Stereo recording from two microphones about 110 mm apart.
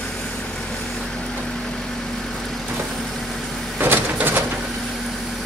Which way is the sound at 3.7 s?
20° right (ahead or behind).